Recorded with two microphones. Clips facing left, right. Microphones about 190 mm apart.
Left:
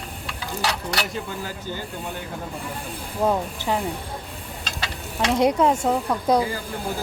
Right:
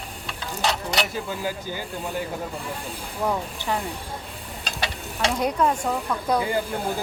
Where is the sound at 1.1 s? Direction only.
10° right (ahead or behind).